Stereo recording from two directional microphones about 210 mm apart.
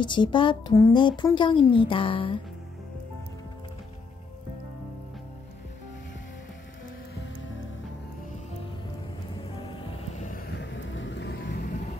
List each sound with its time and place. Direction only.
0.0 s speech: 20° left (ahead or behind)
9.4 s music: 25° left (ahead or behind)
10.6 s vehicle: 60° left (ahead or behind)